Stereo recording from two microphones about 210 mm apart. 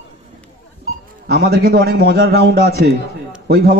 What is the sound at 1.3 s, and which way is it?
A man's voice, 50° right (ahead or behind).